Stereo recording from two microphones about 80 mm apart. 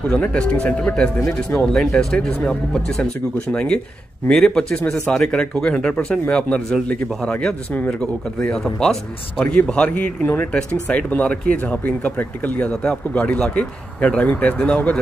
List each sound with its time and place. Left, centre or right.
0.3 s a man's voice: centre
10.5 s a man's voice: centre